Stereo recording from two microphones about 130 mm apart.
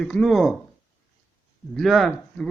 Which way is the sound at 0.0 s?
5° left (ahead or behind).